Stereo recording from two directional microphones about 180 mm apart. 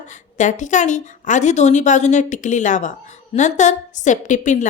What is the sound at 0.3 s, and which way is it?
A woman's voice, 45° left (ahead or behind).